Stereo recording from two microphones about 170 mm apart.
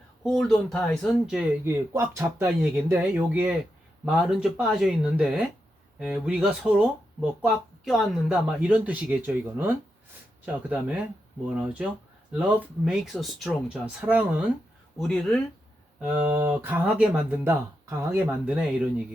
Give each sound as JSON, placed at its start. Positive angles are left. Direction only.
{"t": 0.2, "sound": "speech", "side_deg": 0}
{"t": 1.6, "sound": "speech", "side_deg": -15}
{"t": 14.9, "sound": "speech", "side_deg": 5}
{"t": 16.6, "sound": "speech", "side_deg": -10}